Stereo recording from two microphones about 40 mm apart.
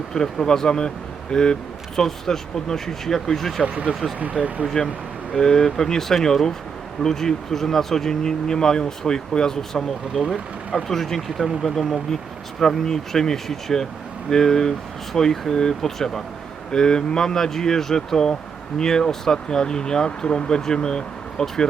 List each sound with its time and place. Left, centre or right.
0.1 s speech: centre
4.2 s speech: right
4.6 s speech: centre
10.1 s speech: centre
10.8 s speech: centre